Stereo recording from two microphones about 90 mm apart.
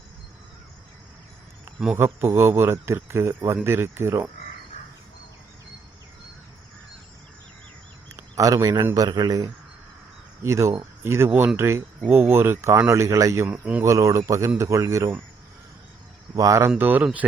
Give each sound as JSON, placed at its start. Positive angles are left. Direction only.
{"t": 2.0, "sound": "a man's voice", "side_deg": -30}
{"t": 8.1, "sound": "a sound", "side_deg": -40}
{"t": 9.0, "sound": "speech", "side_deg": -50}
{"t": 10.4, "sound": "a man's voice", "side_deg": -35}
{"t": 13.5, "sound": "speech", "side_deg": -15}
{"t": 13.8, "sound": "speech", "side_deg": -35}
{"t": 16.3, "sound": "speech", "side_deg": -35}
{"t": 16.7, "sound": "a man's voice", "side_deg": -20}